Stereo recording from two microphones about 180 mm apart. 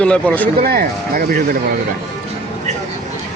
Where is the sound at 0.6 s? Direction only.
55° right (ahead or behind).